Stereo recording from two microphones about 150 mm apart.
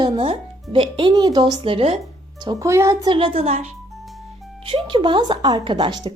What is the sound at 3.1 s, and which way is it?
Speech, 35° right (ahead or behind).